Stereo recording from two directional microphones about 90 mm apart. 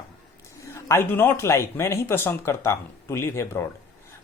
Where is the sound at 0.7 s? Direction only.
30° left (ahead or behind).